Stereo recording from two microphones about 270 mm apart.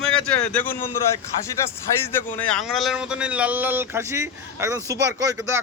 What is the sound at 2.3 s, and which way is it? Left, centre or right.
Speech, centre.